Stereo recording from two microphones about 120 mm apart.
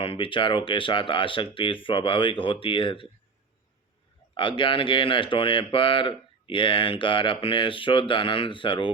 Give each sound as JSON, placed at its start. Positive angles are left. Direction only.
{"t": 0.0, "sound": "speech", "side_deg": 45}
{"t": 4.4, "sound": "speech", "side_deg": 45}